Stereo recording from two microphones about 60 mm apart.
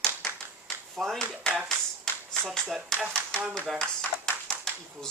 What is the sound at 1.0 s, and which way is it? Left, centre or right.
Speech, centre.